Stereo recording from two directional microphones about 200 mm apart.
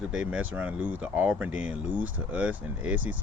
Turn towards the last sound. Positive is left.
turn(degrees=-5)  # may be behind; listen again after turning